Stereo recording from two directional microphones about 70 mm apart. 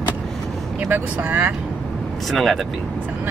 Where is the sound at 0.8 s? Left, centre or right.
Right.